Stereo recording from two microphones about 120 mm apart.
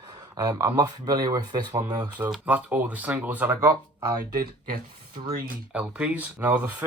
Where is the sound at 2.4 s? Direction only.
15° right (ahead or behind).